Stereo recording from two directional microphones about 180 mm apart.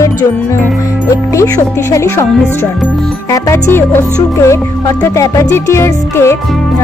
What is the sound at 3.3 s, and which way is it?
Speech, 20° left (ahead or behind).